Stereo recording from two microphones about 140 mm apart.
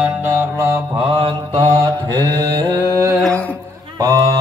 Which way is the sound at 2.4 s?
25° right (ahead or behind).